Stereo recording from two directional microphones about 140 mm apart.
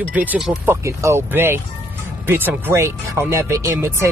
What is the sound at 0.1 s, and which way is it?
Speech, 10° right (ahead or behind).